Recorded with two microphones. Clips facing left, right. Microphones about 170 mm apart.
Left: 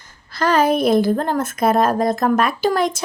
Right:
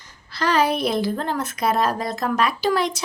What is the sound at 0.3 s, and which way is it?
A woman's voice, 50° left (ahead or behind).